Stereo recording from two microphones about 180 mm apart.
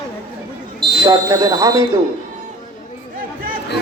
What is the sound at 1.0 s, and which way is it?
Speech, 20° right (ahead or behind).